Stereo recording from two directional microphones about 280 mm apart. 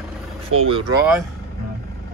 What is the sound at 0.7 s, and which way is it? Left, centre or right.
Speech, centre.